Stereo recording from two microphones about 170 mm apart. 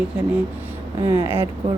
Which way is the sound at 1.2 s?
15° right (ahead or behind).